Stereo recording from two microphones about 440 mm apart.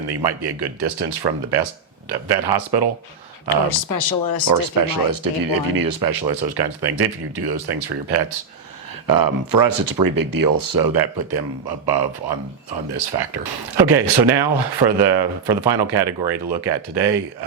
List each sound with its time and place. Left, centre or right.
0.1 s speech: right
3.8 s speech: left
4.4 s speech: right